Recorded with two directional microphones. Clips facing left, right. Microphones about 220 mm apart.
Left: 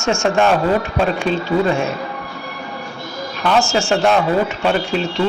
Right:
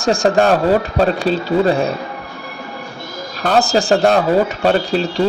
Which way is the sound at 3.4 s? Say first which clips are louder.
Right 2 dB; 40° right (ahead or behind).